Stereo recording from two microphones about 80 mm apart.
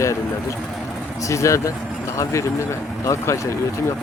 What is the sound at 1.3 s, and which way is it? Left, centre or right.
Speech, left.